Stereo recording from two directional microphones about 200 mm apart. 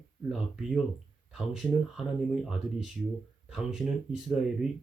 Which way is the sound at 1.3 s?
Centre (ahead or behind).